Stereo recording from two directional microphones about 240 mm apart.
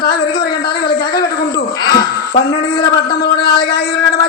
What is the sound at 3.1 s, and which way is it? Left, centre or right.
Speech, left.